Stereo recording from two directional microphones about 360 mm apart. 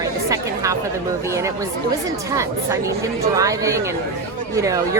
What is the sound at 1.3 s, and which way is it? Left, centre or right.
Speech, centre.